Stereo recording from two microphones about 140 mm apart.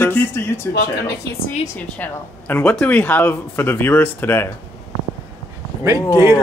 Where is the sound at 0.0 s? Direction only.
15° left (ahead or behind).